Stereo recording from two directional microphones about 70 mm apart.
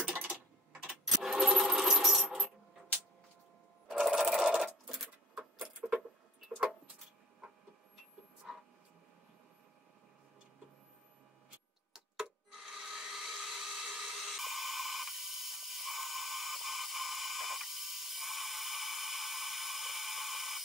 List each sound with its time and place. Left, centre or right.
0.0 s typing: right
0.8 s sewing machine: centre
2.2 s coin: centre
4.0 s sewing machine: centre
5.8 s vehicle: centre
8.5 s a sound: centre
11.9 s wood: centre